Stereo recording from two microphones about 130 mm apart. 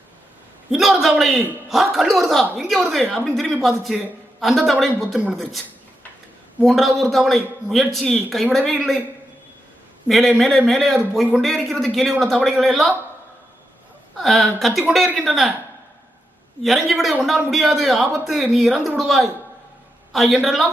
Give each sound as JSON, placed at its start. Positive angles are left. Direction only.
{"t": 0.7, "sound": "a man's voice", "side_deg": 0}
{"t": 6.7, "sound": "a man's voice", "side_deg": 0}
{"t": 10.1, "sound": "a man's voice", "side_deg": 0}
{"t": 14.2, "sound": "a man's voice", "side_deg": 0}
{"t": 16.6, "sound": "a man's voice", "side_deg": 0}